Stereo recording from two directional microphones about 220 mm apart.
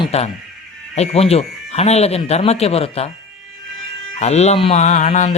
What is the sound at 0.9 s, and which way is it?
Speech, 30° left (ahead or behind).